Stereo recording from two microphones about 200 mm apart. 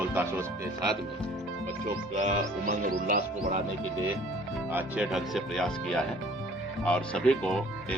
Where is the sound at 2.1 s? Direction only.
35° right (ahead or behind).